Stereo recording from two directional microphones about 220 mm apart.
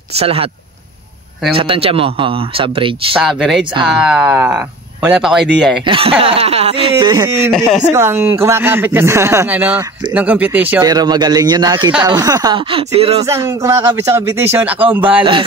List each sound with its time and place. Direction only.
0.1 s speech: 25° right (ahead or behind)
1.5 s speech: 25° right (ahead or behind)
3.2 s speech: centre (ahead or behind)
5.9 s speech: 25° right (ahead or behind)
7.5 s speech: centre (ahead or behind)
7.9 s speech: 10° right (ahead or behind)
13.2 s speech: 15° right (ahead or behind)